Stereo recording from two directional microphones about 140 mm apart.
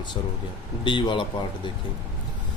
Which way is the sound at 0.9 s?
35° left (ahead or behind).